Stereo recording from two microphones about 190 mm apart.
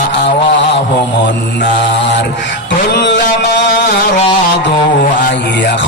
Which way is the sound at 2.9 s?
65° left (ahead or behind).